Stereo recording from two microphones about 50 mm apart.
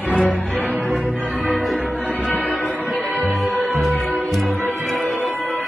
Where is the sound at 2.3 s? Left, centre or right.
Left.